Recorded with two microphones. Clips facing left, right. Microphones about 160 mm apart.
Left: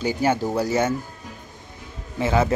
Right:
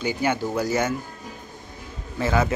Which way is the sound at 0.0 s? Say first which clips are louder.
Left 2 dB; 40° left (ahead or behind).